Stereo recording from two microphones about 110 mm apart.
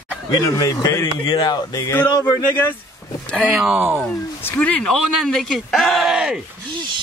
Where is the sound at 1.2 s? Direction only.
50° left (ahead or behind).